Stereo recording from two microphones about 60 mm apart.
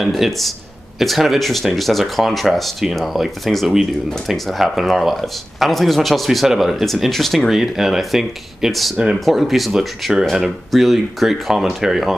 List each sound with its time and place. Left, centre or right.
0.0 s speech: centre